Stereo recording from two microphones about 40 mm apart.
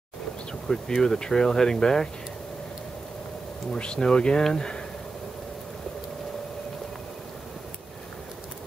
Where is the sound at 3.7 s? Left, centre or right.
Left.